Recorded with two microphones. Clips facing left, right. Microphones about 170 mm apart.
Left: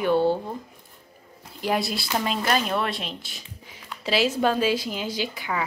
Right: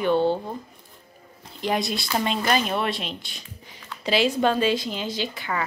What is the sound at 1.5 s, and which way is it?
Speech, 5° left (ahead or behind).